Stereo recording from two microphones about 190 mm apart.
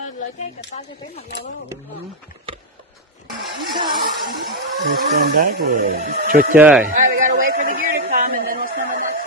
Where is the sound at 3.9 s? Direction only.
50° right (ahead or behind).